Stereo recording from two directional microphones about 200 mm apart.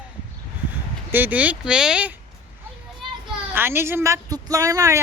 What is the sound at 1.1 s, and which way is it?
Speech, 10° right (ahead or behind).